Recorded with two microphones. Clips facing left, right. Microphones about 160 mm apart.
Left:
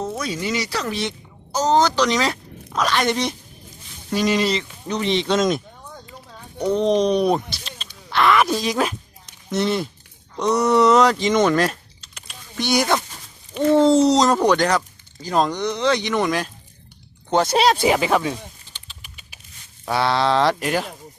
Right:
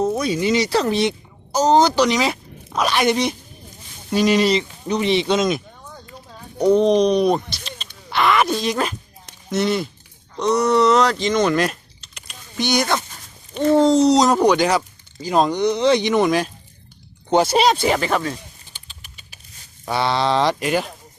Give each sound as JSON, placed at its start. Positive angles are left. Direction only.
{"t": 0.0, "sound": "speech", "side_deg": -20}
{"t": 1.5, "sound": "speech", "side_deg": -15}
{"t": 4.1, "sound": "speech", "side_deg": -20}
{"t": 8.1, "sound": "a sound", "side_deg": 0}
{"t": 9.5, "sound": "speech", "side_deg": -5}
{"t": 11.5, "sound": "a sound", "side_deg": 0}
{"t": 13.5, "sound": "speech", "side_deg": -35}
{"t": 13.7, "sound": "speech", "side_deg": 5}
{"t": 17.4, "sound": "speech", "side_deg": 0}
{"t": 19.8, "sound": "speech", "side_deg": 0}